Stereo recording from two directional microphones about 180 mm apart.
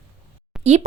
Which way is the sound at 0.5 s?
5° right (ahead or behind).